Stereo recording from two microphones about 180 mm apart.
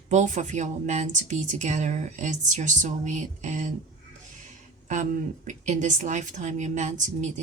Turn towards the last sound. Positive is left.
turn(degrees=-40)  # may be behind; listen again after turning